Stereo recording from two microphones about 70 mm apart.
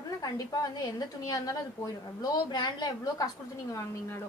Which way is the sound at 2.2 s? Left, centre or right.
Left.